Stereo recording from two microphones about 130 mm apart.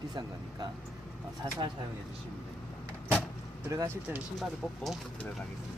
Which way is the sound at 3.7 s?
20° right (ahead or behind).